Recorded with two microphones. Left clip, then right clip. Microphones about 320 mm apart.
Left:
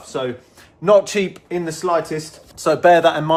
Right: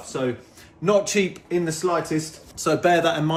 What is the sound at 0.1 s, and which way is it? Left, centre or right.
Speech, centre.